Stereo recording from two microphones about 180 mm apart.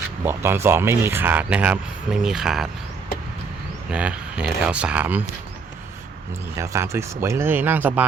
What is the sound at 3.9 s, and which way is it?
Speech, 5° right (ahead or behind).